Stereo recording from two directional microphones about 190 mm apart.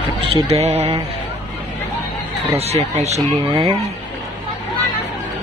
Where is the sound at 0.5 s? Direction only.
35° right (ahead or behind).